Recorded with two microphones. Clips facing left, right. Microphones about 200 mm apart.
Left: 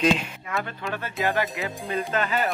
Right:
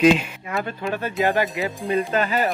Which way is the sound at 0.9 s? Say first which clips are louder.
Right 5 dB; 15° right (ahead or behind).